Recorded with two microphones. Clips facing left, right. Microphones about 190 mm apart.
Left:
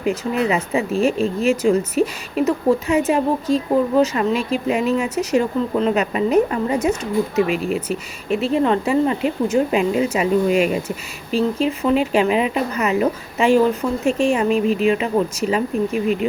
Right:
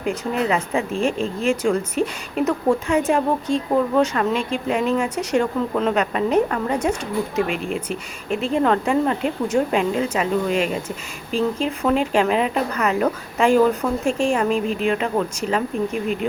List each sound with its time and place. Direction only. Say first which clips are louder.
0.0 s speech: left 2 dB; 5° left (ahead or behind)